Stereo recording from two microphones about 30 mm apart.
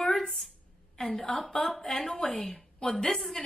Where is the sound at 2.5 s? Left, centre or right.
Centre.